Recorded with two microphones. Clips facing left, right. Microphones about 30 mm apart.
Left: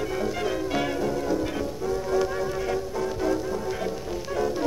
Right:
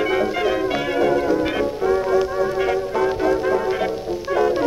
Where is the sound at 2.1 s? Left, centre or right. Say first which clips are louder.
Right 6 dB; right.